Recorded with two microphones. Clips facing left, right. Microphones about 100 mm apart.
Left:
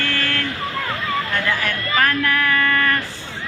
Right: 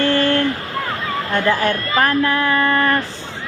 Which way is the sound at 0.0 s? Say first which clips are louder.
Right 8 dB; 30° right (ahead or behind).